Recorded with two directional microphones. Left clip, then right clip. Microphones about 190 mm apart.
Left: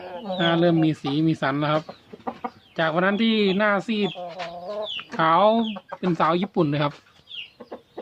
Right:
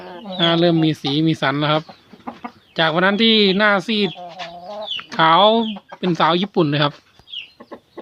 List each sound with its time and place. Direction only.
0.3 s speech: 20° right (ahead or behind)